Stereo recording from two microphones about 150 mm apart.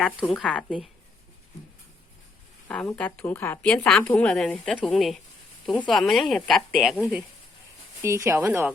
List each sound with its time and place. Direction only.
0.0 s speech: centre (ahead or behind)
2.6 s a woman's voice: 5° left (ahead or behind)
8.0 s a woman's voice: 20° right (ahead or behind)